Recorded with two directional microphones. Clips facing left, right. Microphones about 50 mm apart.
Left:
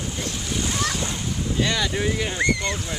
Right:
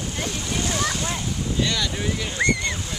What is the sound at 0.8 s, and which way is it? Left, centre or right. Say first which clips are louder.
Splash: even; centre.